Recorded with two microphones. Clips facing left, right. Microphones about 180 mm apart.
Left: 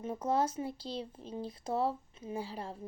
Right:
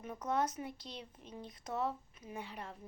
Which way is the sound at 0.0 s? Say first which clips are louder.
Left 4 dB; 30° left (ahead or behind).